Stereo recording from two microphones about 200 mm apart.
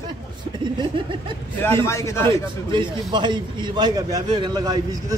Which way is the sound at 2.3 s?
25° right (ahead or behind).